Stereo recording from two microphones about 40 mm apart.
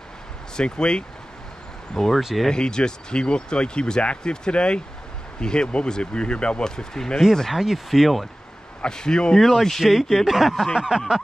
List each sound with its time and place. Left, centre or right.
0.6 s speech: left
2.0 s speech: centre
2.5 s speech: left
6.8 s speech: centre
7.5 s speech: centre
8.8 s speech: centre
9.4 s speech: centre
10.7 s a sound: centre